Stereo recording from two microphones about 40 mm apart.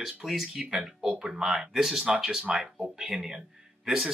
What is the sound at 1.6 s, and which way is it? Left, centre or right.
Speech, centre.